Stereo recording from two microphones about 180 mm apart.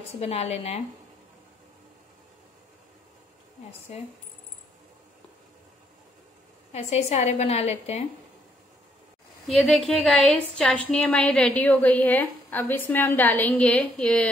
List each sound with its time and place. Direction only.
0.2 s a woman's voice: 35° left (ahead or behind)
6.7 s a woman's voice: 35° left (ahead or behind)
9.5 s a woman's voice: centre (ahead or behind)